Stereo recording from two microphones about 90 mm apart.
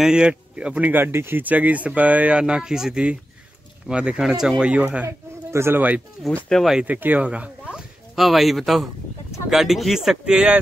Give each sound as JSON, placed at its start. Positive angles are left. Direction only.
{"t": 0.0, "sound": "speech", "side_deg": -10}
{"t": 5.0, "sound": "speech", "side_deg": -30}
{"t": 6.5, "sound": "speech", "side_deg": 0}
{"t": 6.8, "sound": "speech", "side_deg": -20}